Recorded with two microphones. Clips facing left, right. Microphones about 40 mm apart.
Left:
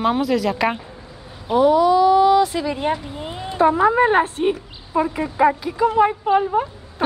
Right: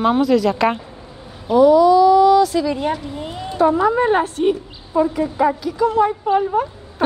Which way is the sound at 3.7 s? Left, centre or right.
Left.